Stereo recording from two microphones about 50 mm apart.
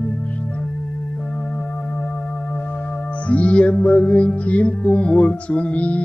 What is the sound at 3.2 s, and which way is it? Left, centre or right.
Music, left.